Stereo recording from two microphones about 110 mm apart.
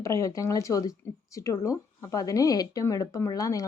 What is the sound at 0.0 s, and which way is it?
A woman's voice, 30° left (ahead or behind).